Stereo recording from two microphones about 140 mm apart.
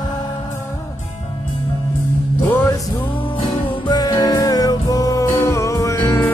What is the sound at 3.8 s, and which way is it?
Music, 30° left (ahead or behind).